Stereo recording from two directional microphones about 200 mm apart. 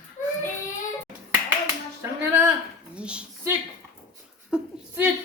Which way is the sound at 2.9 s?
5° right (ahead or behind).